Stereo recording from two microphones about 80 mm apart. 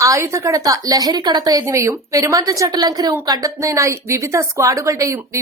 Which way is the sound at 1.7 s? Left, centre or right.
Right.